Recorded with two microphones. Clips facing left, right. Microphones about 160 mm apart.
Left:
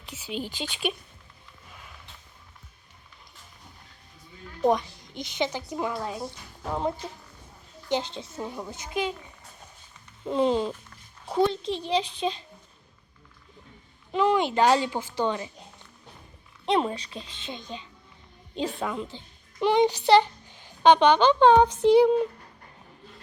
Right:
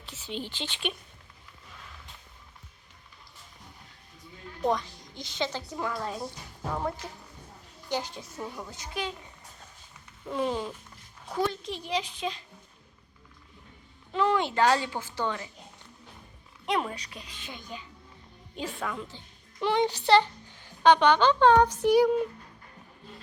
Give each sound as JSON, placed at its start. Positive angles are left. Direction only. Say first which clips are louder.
{"t": 0.0, "sound": "a child's voice", "louder": "left 3 dB", "side_deg": 10}
{"t": 4.6, "sound": "a woman's voice", "louder": "left 5 dB", "side_deg": 20}
{"t": 10.2, "sound": "a woman's voice", "louder": "left 6 dB", "side_deg": 25}
{"t": 14.1, "sound": "a child's voice", "louder": "left 3 dB", "side_deg": 15}
{"t": 16.6, "sound": "a woman's voice", "louder": "left 5 dB", "side_deg": 25}